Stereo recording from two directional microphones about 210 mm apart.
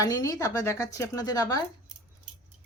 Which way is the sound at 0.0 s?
15° left (ahead or behind).